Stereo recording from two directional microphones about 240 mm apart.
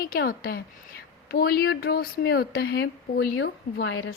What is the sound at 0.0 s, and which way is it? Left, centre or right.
A woman's voice, left.